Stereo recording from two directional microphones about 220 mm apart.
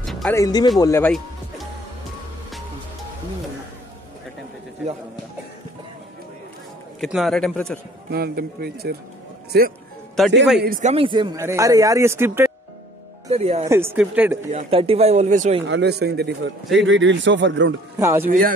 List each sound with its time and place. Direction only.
0.0 s music: centre (ahead or behind)
0.3 s speech: 15° left (ahead or behind)
7.0 s speech: centre (ahead or behind)
8.1 s a man's voice: 45° right (ahead or behind)
10.2 s speech: centre (ahead or behind)
10.6 s a man's voice: 35° right (ahead or behind); by 12.4 s 10° right (ahead or behind)
13.3 s speech: 30° right (ahead or behind)
13.7 s a man's voice: 10° right (ahead or behind)
14.5 s speech: 25° right (ahead or behind)
15.6 s a man's voice: 55° right (ahead or behind)
17.9 s a man's voice: 10° right (ahead or behind)